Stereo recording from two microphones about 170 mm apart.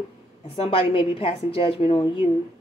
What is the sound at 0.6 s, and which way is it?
A woman's voice, 30° left (ahead or behind).